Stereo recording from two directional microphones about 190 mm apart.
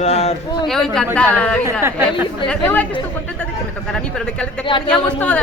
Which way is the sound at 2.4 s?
10° left (ahead or behind).